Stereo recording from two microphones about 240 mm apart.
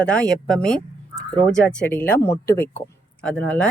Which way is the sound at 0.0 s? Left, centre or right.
Centre.